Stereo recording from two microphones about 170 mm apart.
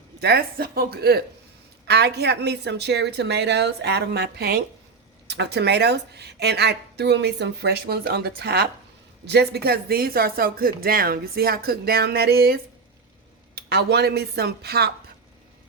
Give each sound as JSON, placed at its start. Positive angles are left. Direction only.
{"t": 0.2, "sound": "speech", "side_deg": -70}
{"t": 5.3, "sound": "speech", "side_deg": -85}
{"t": 13.6, "sound": "speech", "side_deg": -70}